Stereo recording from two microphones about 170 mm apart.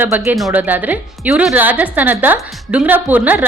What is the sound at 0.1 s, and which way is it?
A woman's voice, 10° right (ahead or behind).